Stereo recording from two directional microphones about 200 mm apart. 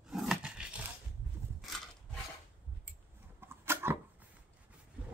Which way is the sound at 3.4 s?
10° right (ahead or behind).